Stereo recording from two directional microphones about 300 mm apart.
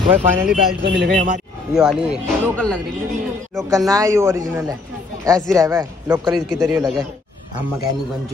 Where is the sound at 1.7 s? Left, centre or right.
Centre.